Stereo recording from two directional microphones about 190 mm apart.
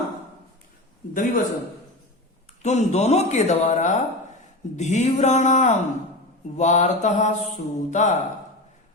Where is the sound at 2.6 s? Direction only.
35° left (ahead or behind).